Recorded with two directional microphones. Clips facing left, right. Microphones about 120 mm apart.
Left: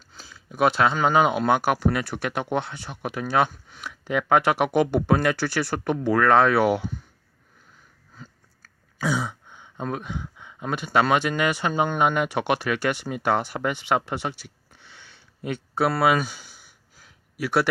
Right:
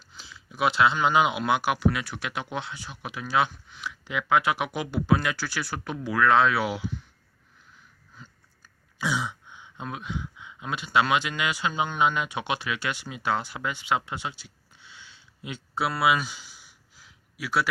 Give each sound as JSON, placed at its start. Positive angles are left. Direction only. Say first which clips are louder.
{"t": 0.2, "sound": "speech", "louder": "left 5 dB", "side_deg": 45}
{"t": 9.0, "sound": "speech", "louder": "left 3 dB", "side_deg": 40}